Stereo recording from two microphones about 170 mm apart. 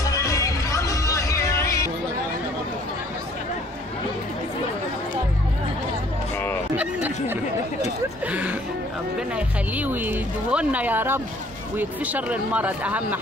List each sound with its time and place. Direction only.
0.1 s music: 20° left (ahead or behind)
8.3 s music: 10° right (ahead or behind)
9.8 s speech: 10° right (ahead or behind)